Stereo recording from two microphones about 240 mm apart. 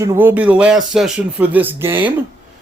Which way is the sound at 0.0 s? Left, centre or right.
Centre.